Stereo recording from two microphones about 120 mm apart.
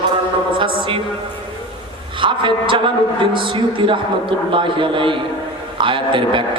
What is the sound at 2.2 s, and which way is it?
A man's voice, 45° right (ahead or behind).